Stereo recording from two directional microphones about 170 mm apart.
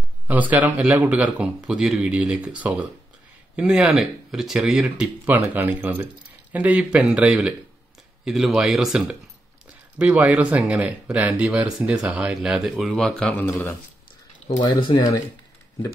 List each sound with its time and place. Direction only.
0.3 s speech: 10° right (ahead or behind); by 13.7 s 15° left (ahead or behind)
14.6 s speech: 25° left (ahead or behind)